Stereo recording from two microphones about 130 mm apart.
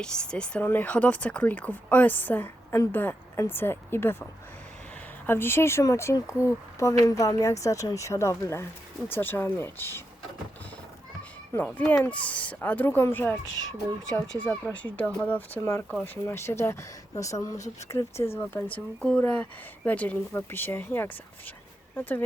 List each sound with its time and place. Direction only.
0.0 s speech: 5° left (ahead or behind)
11.5 s speech: 15° left (ahead or behind)